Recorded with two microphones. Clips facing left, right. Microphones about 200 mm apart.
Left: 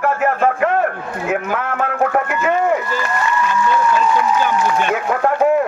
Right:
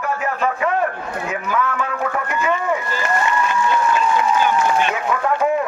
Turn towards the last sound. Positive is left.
turn(degrees=55)  # may be behind; listen again after turning